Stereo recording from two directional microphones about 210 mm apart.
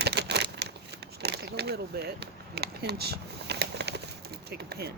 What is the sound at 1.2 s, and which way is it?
Speech, 50° right (ahead or behind).